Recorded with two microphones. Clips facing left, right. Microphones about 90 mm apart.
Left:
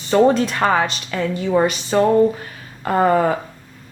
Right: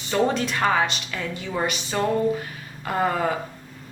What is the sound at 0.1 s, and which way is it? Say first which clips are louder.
Speech: left 8 dB; 40° left (ahead or behind).